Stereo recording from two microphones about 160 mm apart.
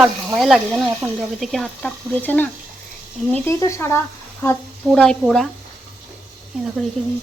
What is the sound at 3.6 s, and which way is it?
Speech, 20° left (ahead or behind).